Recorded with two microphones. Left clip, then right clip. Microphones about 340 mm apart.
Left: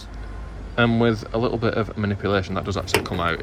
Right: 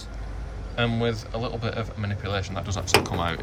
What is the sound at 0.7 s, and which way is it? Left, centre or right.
Speech, centre.